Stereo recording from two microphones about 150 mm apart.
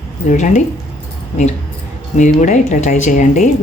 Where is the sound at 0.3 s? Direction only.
55° left (ahead or behind).